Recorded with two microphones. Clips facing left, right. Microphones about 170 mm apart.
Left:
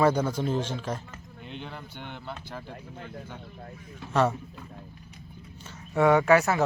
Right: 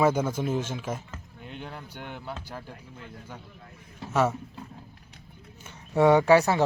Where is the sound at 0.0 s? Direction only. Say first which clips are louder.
Even; 10° right (ahead or behind).